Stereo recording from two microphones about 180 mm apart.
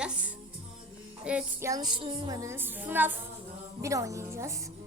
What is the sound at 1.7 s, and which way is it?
A woman's voice, 20° right (ahead or behind).